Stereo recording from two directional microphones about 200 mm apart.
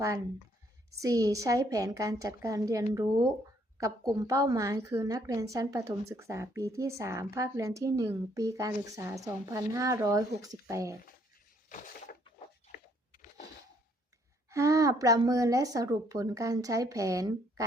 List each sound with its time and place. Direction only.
0.9 s a woman's voice: 15° right (ahead or behind)
11.7 s a sound: 40° left (ahead or behind)
14.5 s a woman's voice: 15° right (ahead or behind)